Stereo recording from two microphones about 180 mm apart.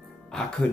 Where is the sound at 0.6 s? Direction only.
5° left (ahead or behind).